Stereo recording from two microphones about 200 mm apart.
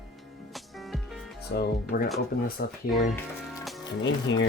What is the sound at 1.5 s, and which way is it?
Speech, 50° left (ahead or behind).